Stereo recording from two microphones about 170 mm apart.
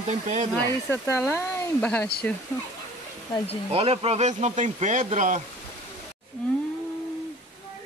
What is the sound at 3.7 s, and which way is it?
Speech, 35° right (ahead or behind).